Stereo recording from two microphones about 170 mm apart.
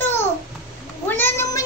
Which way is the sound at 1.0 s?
10° left (ahead or behind).